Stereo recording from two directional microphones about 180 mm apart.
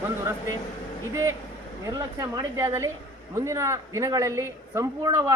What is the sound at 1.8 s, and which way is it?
A man's voice, 20° right (ahead or behind).